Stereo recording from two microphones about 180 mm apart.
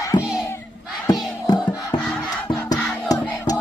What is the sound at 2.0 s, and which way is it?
Crowd, centre (ahead or behind).